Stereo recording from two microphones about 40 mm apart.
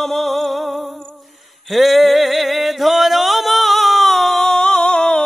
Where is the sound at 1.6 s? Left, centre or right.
Centre.